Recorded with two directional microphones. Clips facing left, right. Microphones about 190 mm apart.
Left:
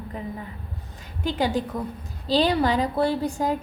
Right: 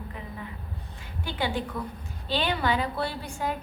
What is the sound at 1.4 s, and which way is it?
A woman's voice, 40° left (ahead or behind).